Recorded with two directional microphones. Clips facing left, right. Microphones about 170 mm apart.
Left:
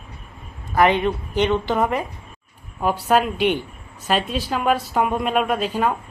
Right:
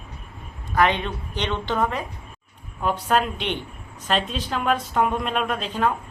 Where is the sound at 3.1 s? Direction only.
5° left (ahead or behind).